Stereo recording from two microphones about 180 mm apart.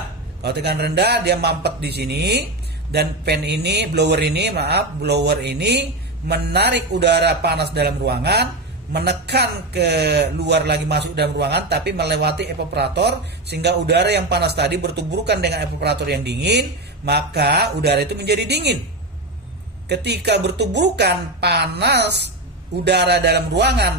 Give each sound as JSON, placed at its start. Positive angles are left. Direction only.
{"t": 0.4, "sound": "a man's voice", "side_deg": -65}
{"t": 19.9, "sound": "a man's voice", "side_deg": -65}